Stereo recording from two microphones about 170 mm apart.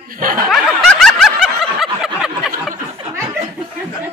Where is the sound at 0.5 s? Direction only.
Centre (ahead or behind).